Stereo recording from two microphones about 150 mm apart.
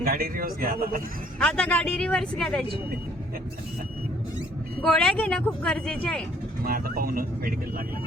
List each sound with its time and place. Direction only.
0.0 s speech: 80° right
1.4 s speech: 5° left (ahead or behind)
4.8 s speech: 5° left (ahead or behind)
6.7 s speech: 75° right (ahead or behind)